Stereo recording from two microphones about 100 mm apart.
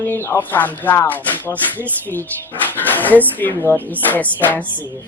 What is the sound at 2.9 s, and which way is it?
Speech, 15° left (ahead or behind).